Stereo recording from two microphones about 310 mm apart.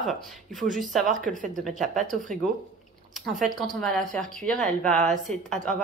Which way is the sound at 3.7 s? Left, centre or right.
Centre.